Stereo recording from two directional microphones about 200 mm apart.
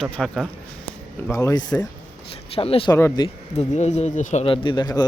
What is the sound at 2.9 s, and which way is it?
Speech, 15° left (ahead or behind).